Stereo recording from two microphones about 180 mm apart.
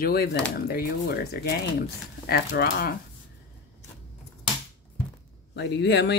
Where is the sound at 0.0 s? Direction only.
60° left (ahead or behind).